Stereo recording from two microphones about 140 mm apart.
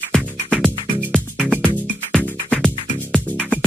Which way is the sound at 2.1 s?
5° left (ahead or behind).